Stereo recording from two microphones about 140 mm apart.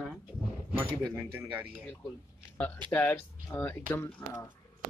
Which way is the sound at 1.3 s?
10° right (ahead or behind).